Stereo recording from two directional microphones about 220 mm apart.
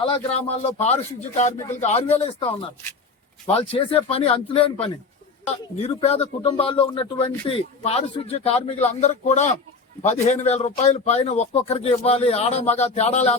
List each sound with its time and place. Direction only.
0.0 s speech: 25° left (ahead or behind)